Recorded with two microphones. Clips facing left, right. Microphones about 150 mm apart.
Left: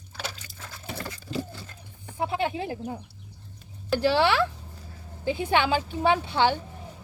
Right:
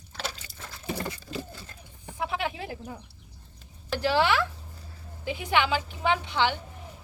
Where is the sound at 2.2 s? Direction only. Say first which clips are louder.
Left 4 dB; 30° left (ahead or behind).